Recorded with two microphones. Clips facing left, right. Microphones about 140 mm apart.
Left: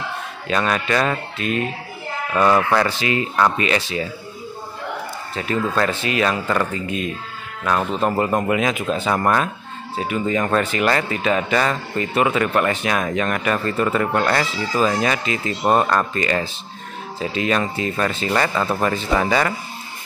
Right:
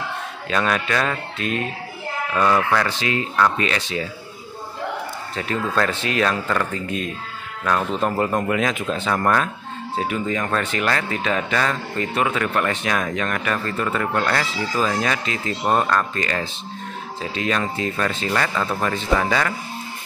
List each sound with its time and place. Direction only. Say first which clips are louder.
0.5 s speech: left 1 dB; 5° left (ahead or behind)
2.5 s speech: left 2 dB; 25° left (ahead or behind)
2.9 s speech: left 2 dB; 5° left (ahead or behind)
5.3 s speech: left 2 dB; 5° left (ahead or behind)